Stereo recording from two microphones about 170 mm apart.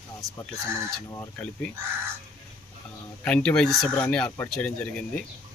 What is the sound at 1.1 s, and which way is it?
Speech, 10° left (ahead or behind).